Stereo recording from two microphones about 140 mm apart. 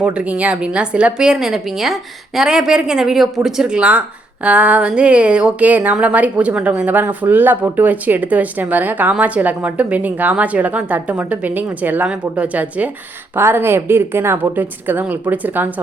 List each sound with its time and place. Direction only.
0.0 s a woman's voice: 10° right (ahead or behind)